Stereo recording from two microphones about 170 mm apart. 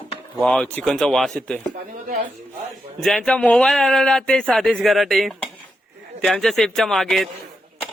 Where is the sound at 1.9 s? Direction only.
50° right (ahead or behind).